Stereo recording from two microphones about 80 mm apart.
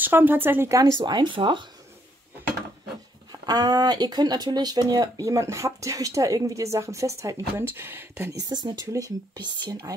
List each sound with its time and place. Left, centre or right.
0.0 s speech: right
0.7 s speech: right
0.9 s speech: right
3.3 s speech: right
7.6 s speech: right
8.4 s speech: right
8.9 s speech: right